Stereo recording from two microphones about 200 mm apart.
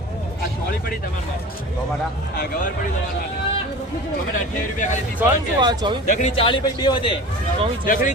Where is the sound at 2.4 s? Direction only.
40° left (ahead or behind).